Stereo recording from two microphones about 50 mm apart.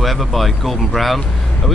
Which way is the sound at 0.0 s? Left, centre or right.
Centre.